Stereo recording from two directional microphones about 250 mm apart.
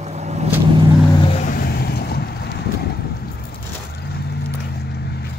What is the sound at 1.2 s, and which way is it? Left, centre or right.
Vehicle, left.